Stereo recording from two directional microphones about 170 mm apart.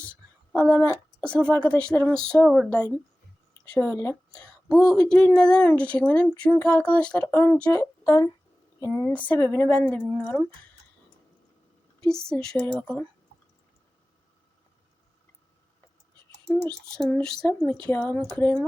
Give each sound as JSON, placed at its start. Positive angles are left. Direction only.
{"t": 0.5, "sound": "a woman's voice", "side_deg": 5}
{"t": 12.0, "sound": "speech", "side_deg": 5}
{"t": 16.6, "sound": "speech", "side_deg": 5}